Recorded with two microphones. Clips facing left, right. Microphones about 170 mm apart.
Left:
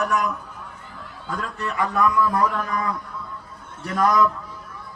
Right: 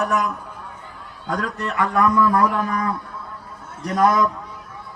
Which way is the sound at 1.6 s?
65° right (ahead or behind).